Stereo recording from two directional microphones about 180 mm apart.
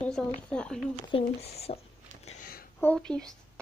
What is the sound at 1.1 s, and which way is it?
Speech, 35° left (ahead or behind).